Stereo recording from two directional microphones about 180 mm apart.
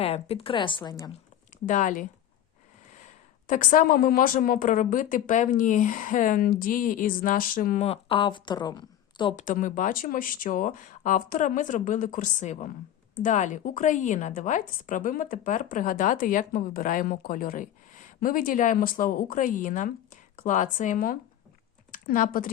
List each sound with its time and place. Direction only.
0.0 s speech: 35° left (ahead or behind)
1.6 s speech: 45° left (ahead or behind)
3.4 s speech: 45° left (ahead or behind); by 9.3 s 25° left (ahead or behind)
9.3 s speech: 45° left (ahead or behind)